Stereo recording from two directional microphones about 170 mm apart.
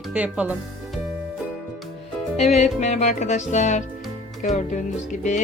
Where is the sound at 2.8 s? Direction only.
45° left (ahead or behind).